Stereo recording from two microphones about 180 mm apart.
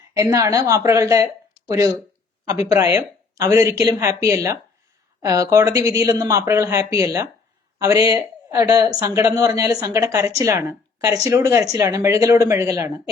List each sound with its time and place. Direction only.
0.2 s a woman's voice: 15° right (ahead or behind)